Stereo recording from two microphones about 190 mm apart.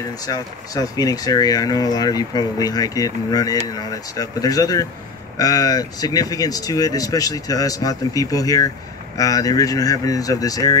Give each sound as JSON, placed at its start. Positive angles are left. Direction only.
{"t": 0.3, "sound": "speech", "side_deg": 20}